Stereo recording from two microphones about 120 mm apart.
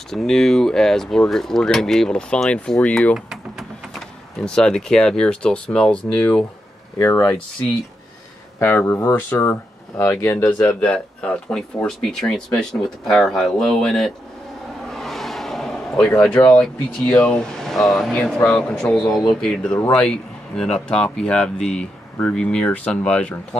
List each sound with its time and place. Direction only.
0.1 s speech: 5° left (ahead or behind); by 7.2 s 20° left (ahead or behind)
8.5 s speech: 20° left (ahead or behind); by 14.1 s 5° left (ahead or behind)
14.9 s a sound: centre (ahead or behind)
16.4 s speech: 10° left (ahead or behind)